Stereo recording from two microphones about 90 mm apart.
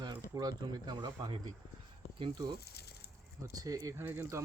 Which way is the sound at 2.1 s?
60° right (ahead or behind).